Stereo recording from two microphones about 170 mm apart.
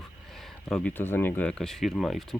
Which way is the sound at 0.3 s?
Centre (ahead or behind).